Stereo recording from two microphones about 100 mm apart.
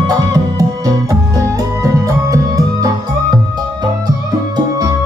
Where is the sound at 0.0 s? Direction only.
35° right (ahead or behind).